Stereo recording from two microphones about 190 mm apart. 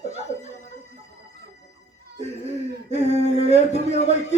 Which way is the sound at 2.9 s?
35° left (ahead or behind).